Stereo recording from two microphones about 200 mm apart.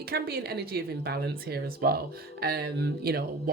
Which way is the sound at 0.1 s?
50° right (ahead or behind).